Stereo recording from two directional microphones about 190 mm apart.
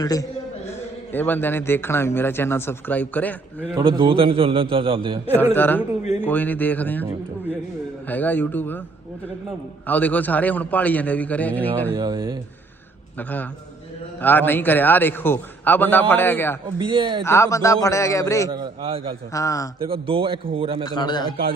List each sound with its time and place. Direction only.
0.0 s a man's voice: 20° left (ahead or behind)
3.8 s a man's voice: 25° right (ahead or behind)
5.5 s a man's voice: 10° left (ahead or behind)
8.0 s a man's voice: 10° left (ahead or behind)
9.8 s a man's voice: 10° left (ahead or behind)
11.9 s a man's voice: 20° right (ahead or behind)
13.1 s a man's voice: 10° left (ahead or behind)
16.6 s a man's voice: 25° right (ahead or behind)
17.2 s a man's voice: 15° left (ahead or behind)
18.5 s a man's voice: 25° right (ahead or behind)
19.3 s a man's voice: 15° left (ahead or behind)
19.8 s a man's voice: 30° right (ahead or behind)
20.8 s a man's voice: 20° left (ahead or behind)